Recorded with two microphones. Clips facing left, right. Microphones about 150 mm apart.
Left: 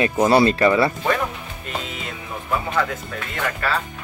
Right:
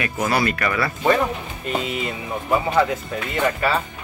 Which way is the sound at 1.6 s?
5° right (ahead or behind).